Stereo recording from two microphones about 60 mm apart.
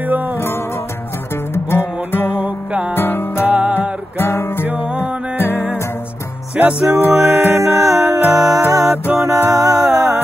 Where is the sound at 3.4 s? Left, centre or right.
Right.